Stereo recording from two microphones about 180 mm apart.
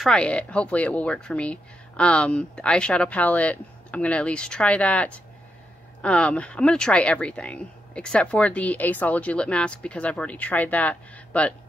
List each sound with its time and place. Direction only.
0.0 s speech: 5° left (ahead or behind)